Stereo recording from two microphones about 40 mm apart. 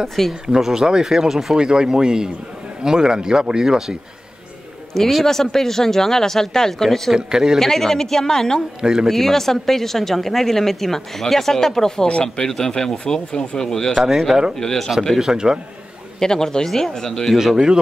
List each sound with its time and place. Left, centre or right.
0.3 s speech: centre
5.2 s speech: centre
7.2 s speech: centre
7.5 s speech: centre
8.8 s speech: centre
9.1 s speech: centre
13.9 s speech: centre
14.6 s speech: centre
15.1 s speech: centre
16.2 s speech: centre
17.3 s speech: centre